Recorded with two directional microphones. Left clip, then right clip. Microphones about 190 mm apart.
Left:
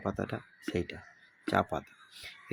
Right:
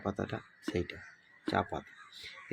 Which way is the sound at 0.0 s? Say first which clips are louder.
Left 2 dB; 15° left (ahead or behind).